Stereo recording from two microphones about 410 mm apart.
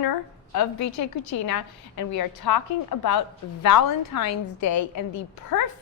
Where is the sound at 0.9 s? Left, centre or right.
Left.